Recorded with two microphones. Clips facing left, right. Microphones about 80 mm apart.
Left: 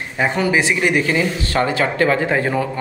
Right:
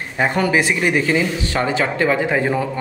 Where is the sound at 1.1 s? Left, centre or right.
Centre.